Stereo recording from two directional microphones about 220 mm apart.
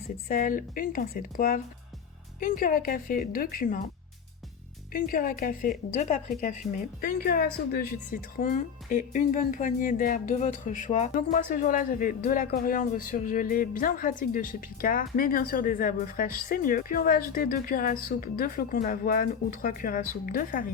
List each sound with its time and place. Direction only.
0.3 s speech: 40° left (ahead or behind)
4.9 s a woman's voice: 40° left (ahead or behind)